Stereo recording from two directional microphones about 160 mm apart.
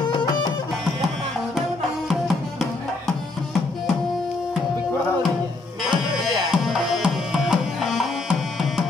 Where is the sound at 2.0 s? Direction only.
Centre (ahead or behind).